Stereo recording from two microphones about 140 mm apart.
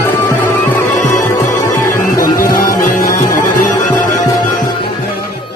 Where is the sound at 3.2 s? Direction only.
25° left (ahead or behind).